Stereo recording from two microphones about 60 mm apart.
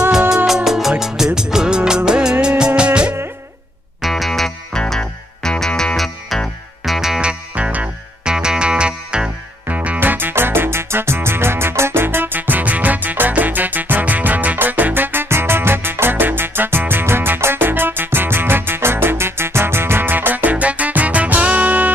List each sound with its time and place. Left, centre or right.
0.7 s music: centre
4.0 s music: centre
5.9 s music: centre
7.2 s music: centre
9.7 s music: right